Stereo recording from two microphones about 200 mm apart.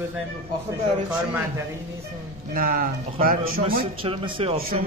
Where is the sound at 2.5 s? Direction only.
45° right (ahead or behind).